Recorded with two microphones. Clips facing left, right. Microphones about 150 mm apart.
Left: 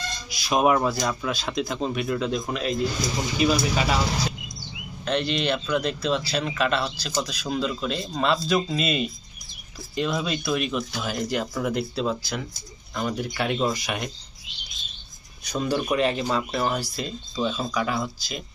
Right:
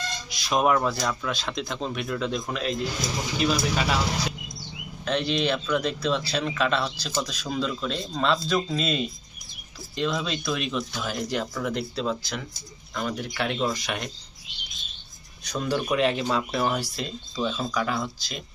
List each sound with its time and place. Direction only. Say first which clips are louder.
0.3 s speech: left 2 dB; 5° left (ahead or behind)
5.0 s speech: even; centre (ahead or behind)
15.4 s speech: left 1 dB; 5° left (ahead or behind)